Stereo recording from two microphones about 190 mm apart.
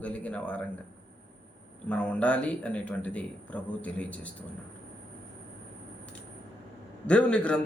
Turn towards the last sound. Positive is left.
turn(degrees=5)  # may be behind; listen again after turning